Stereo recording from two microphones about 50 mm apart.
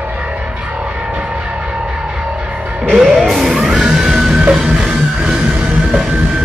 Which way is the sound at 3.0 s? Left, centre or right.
Centre.